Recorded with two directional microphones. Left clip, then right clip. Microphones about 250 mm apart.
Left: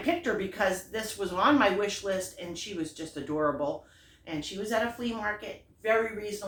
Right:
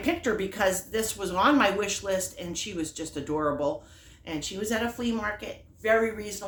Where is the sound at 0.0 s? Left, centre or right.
Right.